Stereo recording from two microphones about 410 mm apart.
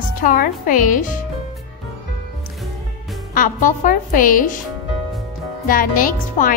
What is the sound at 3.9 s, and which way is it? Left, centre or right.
Speech, left.